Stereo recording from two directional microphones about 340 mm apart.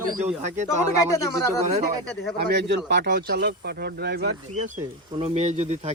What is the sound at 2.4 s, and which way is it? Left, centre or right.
Speech, right.